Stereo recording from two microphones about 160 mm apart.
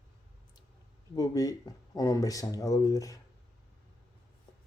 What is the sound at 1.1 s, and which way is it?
Speech, 20° left (ahead or behind).